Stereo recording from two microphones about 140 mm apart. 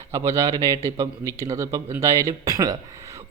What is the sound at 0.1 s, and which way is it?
Speech, 25° right (ahead or behind).